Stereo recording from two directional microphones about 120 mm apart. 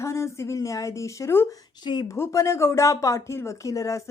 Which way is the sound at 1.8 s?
40° left (ahead or behind).